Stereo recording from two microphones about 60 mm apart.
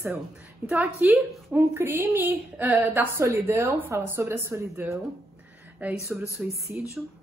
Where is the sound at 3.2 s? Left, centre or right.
Right.